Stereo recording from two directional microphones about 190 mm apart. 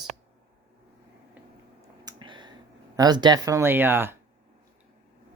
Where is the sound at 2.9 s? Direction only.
20° right (ahead or behind).